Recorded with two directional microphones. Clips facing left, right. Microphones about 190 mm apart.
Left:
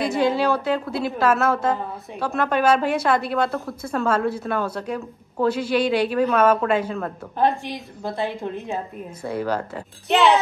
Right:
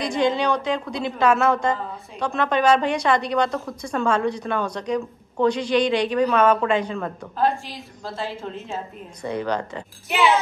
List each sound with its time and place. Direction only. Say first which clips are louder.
0.0 s a woman's voice: left 1 dB; 5° left (ahead or behind)
7.3 s a woman's voice: left 2 dB; 20° left (ahead or behind)
9.2 s a woman's voice: even; 5° left (ahead or behind)